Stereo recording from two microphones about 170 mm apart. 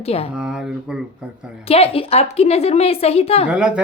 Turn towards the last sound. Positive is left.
turn(degrees=-5)  # may be behind; listen again after turning